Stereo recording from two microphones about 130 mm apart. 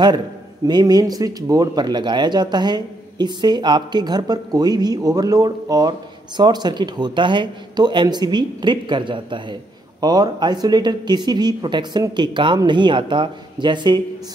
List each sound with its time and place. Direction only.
0.7 s speech: 30° right (ahead or behind)